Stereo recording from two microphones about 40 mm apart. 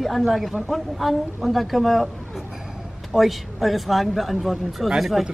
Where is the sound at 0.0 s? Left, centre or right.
Centre.